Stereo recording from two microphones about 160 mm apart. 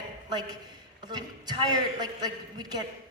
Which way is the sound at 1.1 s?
25° right (ahead or behind).